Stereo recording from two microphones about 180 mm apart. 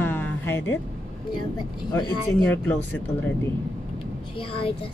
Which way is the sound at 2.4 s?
10° left (ahead or behind).